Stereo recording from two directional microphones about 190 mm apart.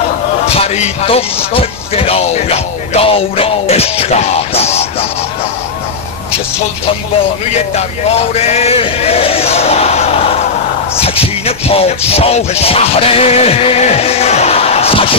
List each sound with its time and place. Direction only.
0.6 s speech: 35° left (ahead or behind)
8.4 s speech: 35° left (ahead or behind)
11.0 s music: 30° left (ahead or behind)